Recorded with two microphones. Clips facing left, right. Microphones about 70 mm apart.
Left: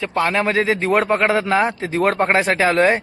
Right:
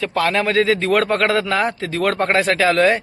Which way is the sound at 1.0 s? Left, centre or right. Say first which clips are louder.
Even; centre.